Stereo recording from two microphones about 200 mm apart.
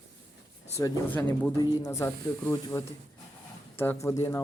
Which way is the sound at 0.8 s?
15° left (ahead or behind).